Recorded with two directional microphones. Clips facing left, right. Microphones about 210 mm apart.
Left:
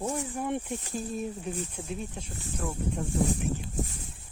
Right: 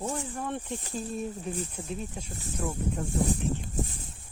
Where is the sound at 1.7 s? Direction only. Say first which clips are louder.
Even; centre (ahead or behind).